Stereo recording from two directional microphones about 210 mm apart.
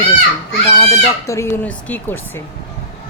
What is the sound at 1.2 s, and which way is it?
Speech, 10° left (ahead or behind).